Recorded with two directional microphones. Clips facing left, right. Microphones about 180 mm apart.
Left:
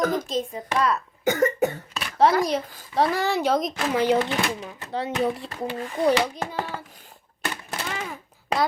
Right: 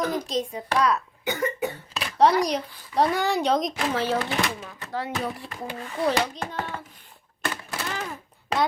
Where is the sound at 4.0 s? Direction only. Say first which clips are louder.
Left 6 dB; 15° left (ahead or behind).